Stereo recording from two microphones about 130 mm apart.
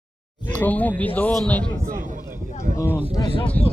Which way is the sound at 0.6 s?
15° left (ahead or behind).